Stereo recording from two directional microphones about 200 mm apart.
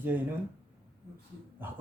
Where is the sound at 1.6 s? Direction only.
10° right (ahead or behind).